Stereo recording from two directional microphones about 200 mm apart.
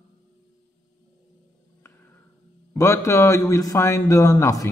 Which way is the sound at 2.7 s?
15° left (ahead or behind).